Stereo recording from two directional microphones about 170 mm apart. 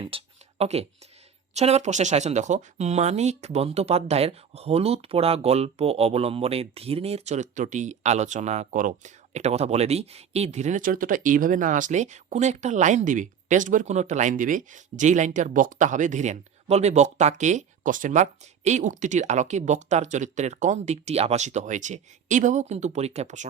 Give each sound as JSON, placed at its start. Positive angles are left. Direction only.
{"t": 0.1, "sound": "speech", "side_deg": -35}